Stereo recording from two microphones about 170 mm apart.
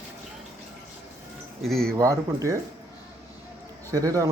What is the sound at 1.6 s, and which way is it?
Speech, centre (ahead or behind).